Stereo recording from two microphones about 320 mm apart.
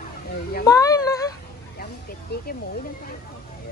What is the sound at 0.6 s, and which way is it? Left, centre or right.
Speech, centre.